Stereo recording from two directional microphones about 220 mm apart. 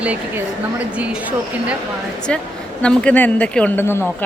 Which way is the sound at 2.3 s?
5° left (ahead or behind).